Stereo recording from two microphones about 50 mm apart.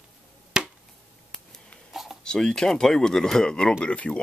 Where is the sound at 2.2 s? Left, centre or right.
Centre.